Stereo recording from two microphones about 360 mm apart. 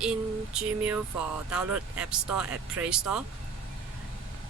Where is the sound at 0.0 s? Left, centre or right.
Centre.